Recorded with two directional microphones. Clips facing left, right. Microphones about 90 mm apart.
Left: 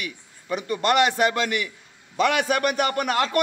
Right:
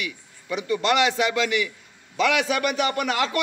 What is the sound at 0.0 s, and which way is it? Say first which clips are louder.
A man's voice: right 2 dB; 45° left (ahead or behind).